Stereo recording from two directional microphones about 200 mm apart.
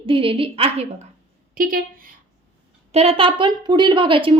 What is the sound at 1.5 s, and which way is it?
Speech, 45° right (ahead or behind).